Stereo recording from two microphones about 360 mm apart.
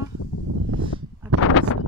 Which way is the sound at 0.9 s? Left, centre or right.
Centre.